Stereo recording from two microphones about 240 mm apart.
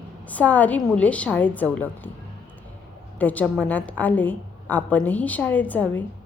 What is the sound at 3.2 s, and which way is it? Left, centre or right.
A woman's voice, centre.